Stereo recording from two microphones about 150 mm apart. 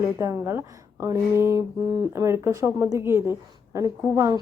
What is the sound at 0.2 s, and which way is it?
Speech, 20° right (ahead or behind).